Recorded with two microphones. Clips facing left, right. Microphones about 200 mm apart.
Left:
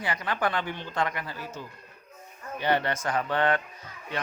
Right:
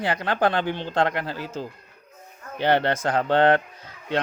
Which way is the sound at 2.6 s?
80° right.